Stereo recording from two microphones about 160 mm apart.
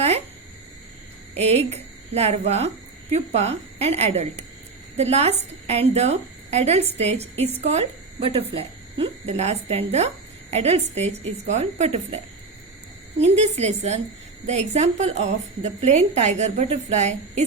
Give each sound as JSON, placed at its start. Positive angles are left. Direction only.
{"t": 1.4, "sound": "a woman's voice", "side_deg": -40}